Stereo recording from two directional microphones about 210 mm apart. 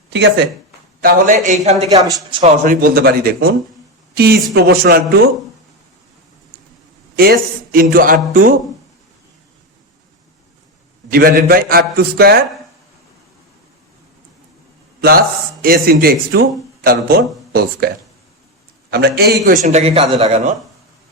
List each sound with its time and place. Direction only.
0.1 s speech: 55° right (ahead or behind)
1.0 s a man's voice: 40° right (ahead or behind)
2.0 s a woman's voice: 15° right (ahead or behind)
2.4 s a woman's voice: 40° right (ahead or behind)
7.2 s speech: 45° right (ahead or behind)
11.1 s speech: 45° right (ahead or behind)
15.6 s speech: 45° right (ahead or behind)
18.9 s a man's voice: 50° right (ahead or behind); by 20.6 s 30° right (ahead or behind)